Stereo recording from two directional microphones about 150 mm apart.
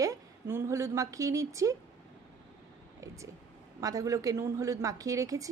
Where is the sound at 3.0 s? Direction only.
20° right (ahead or behind).